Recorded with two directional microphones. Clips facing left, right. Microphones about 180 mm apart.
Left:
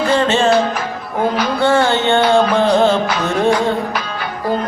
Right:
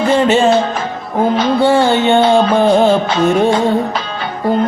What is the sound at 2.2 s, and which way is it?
Music, 25° right (ahead or behind).